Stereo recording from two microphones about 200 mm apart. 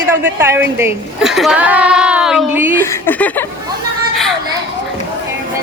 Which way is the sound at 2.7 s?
10° left (ahead or behind).